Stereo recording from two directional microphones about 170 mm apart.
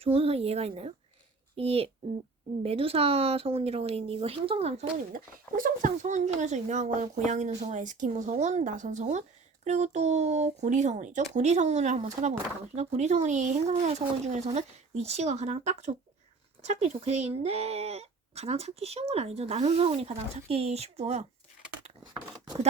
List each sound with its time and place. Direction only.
0.0 s speech: 35° right (ahead or behind)
5.1 s speech: 55° right (ahead or behind)
22.0 s a sound: 25° right (ahead or behind)